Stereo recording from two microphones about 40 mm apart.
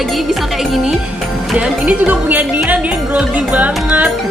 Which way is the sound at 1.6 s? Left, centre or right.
Right.